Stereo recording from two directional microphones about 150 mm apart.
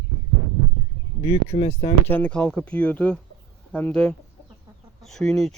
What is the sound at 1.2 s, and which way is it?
Speech, 40° left (ahead or behind).